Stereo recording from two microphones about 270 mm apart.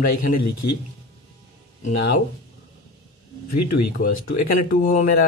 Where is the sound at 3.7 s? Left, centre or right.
Left.